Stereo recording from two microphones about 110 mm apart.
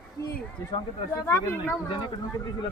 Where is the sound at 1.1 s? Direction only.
25° left (ahead or behind).